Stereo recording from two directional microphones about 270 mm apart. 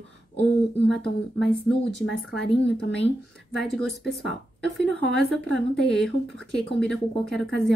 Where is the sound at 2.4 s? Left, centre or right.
Left.